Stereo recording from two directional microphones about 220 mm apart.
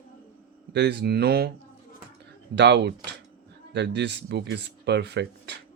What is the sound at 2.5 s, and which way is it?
Speech, 50° right (ahead or behind).